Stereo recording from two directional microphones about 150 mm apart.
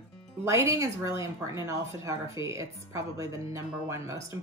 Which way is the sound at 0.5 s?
20° right (ahead or behind).